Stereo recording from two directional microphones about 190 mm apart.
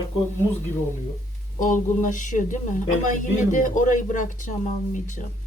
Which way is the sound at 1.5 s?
45° left (ahead or behind).